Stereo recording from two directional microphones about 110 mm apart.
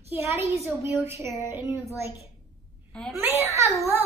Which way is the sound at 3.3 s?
75° left (ahead or behind).